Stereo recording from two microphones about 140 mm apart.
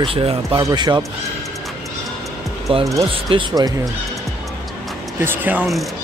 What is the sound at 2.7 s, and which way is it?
Speech, 40° right (ahead or behind).